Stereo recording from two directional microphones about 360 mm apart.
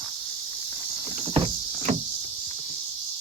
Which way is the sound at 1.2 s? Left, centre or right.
Centre.